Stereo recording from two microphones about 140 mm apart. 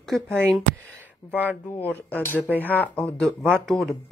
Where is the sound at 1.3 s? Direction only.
10° left (ahead or behind).